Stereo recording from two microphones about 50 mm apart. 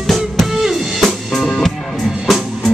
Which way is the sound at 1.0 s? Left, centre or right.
Centre.